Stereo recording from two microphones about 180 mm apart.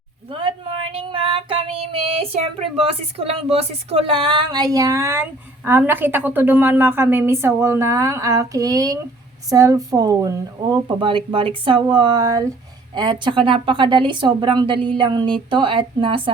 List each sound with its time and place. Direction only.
0.3 s female singing: 30° right (ahead or behind)
2.8 s a woman's voice: 35° right (ahead or behind)